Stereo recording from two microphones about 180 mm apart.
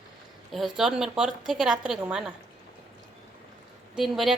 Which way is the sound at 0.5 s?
Centre (ahead or behind).